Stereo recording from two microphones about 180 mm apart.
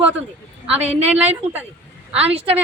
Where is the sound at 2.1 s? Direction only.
30° right (ahead or behind).